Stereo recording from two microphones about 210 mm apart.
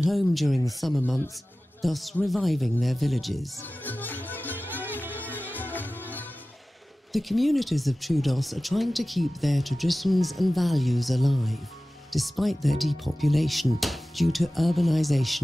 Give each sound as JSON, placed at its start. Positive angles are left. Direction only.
{"t": 0.0, "sound": "speech", "side_deg": 0}
{"t": 5.1, "sound": "music", "side_deg": 10}
{"t": 7.1, "sound": "speech", "side_deg": 0}